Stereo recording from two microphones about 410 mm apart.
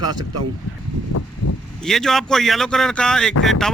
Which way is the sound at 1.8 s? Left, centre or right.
Centre.